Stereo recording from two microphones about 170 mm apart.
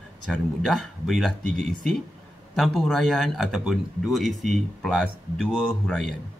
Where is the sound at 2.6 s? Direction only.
Centre (ahead or behind).